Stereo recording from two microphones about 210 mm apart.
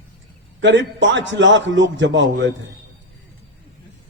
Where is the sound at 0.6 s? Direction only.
60° right (ahead or behind).